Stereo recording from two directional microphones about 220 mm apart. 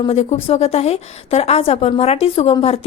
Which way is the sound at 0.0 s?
30° left (ahead or behind).